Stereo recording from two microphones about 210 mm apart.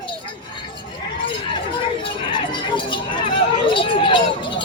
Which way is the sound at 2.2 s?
25° left (ahead or behind).